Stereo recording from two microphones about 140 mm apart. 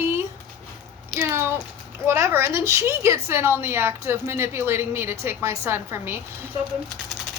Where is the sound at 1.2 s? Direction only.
15° right (ahead or behind).